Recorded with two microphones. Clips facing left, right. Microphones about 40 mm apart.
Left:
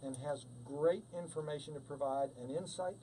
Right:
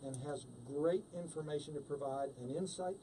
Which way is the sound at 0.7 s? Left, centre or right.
Centre.